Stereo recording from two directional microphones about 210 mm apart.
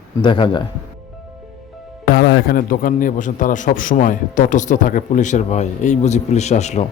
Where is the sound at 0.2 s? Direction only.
20° left (ahead or behind).